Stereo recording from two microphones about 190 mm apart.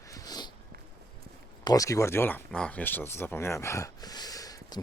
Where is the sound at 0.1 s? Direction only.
20° left (ahead or behind).